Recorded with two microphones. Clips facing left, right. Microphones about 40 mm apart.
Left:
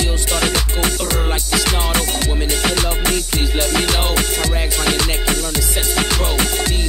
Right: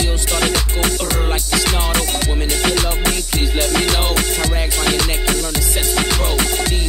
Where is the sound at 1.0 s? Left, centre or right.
Centre.